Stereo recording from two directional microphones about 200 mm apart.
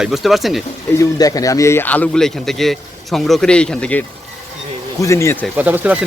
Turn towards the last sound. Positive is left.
turn(degrees=-10)  # may be behind; listen again after turning